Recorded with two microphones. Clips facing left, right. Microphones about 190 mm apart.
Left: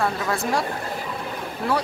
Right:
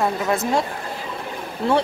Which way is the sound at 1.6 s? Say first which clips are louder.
Right 5 dB; 25° right (ahead or behind).